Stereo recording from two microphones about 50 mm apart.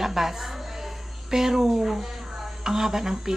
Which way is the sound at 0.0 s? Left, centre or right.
Centre.